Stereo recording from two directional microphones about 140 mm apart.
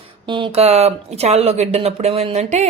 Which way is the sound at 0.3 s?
35° right (ahead or behind).